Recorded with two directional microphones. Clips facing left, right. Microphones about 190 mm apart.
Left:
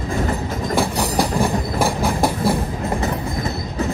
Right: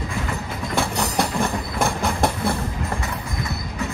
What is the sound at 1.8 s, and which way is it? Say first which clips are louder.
Train: left 2 dB; centre (ahead or behind).